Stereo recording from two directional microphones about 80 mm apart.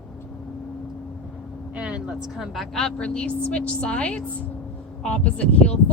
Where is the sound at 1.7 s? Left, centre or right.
Centre.